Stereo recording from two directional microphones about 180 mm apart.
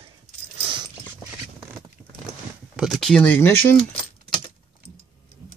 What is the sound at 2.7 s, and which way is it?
Speech, centre (ahead or behind).